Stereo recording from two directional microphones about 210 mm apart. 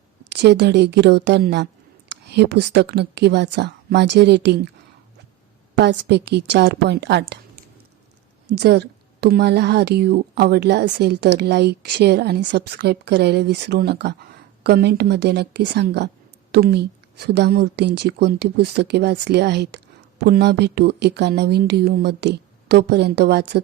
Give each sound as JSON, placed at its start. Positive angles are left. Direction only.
{"t": 0.3, "sound": "a woman's voice", "side_deg": -55}
{"t": 5.7, "sound": "a woman's voice", "side_deg": -60}